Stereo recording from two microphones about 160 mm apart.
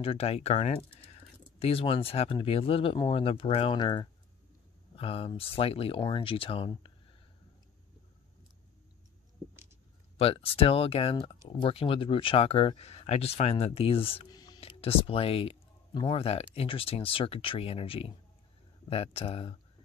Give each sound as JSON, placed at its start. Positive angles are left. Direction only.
{"t": 0.0, "sound": "speech", "side_deg": 35}
{"t": 10.1, "sound": "speech", "side_deg": 35}
{"t": 14.6, "sound": "speech", "side_deg": 35}